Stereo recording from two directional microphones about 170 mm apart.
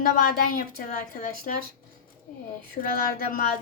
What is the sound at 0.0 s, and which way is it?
Speech, 55° left (ahead or behind).